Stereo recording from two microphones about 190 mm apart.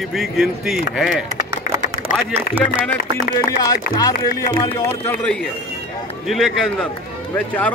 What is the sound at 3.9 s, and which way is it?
Speech, 20° left (ahead or behind).